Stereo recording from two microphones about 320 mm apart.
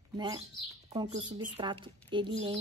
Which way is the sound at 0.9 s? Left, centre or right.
Centre.